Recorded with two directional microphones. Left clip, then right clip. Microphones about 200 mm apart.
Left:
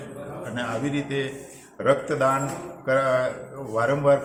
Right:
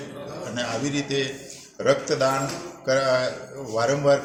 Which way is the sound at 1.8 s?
Centre (ahead or behind).